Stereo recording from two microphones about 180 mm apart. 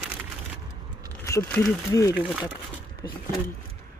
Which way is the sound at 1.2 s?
15° left (ahead or behind).